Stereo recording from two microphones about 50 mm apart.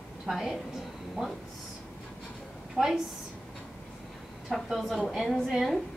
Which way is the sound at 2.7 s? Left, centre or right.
Centre.